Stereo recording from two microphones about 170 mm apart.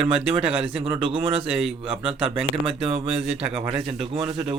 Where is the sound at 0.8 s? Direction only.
35° right (ahead or behind).